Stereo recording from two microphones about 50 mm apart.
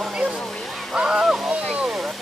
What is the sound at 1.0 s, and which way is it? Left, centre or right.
Speech, centre.